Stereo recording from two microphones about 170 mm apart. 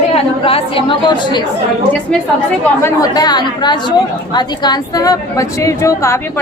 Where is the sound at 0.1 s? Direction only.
35° left (ahead or behind).